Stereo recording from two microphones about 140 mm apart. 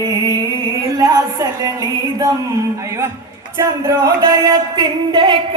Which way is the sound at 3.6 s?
25° right (ahead or behind).